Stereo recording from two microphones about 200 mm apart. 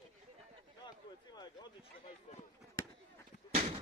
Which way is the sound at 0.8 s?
20° left (ahead or behind).